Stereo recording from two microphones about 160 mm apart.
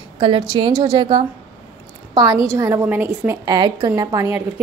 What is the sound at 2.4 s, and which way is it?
Speech, 20° right (ahead or behind).